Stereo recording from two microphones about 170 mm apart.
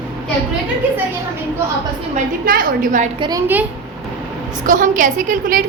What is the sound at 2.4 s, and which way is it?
Speech, 55° right (ahead or behind).